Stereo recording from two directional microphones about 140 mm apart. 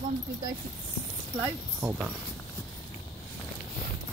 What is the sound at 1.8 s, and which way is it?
Speech, centre (ahead or behind).